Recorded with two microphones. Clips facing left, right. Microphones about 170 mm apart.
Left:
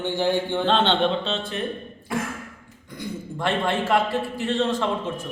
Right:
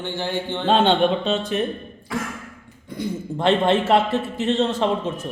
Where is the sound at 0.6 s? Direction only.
10° right (ahead or behind).